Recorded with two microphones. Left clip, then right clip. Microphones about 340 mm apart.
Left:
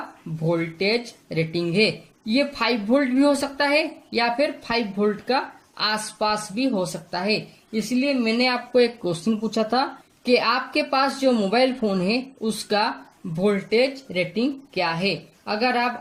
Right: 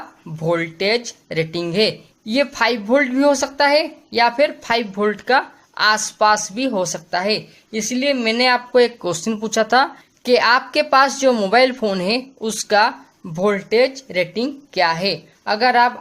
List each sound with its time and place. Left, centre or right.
0.5 s speech: right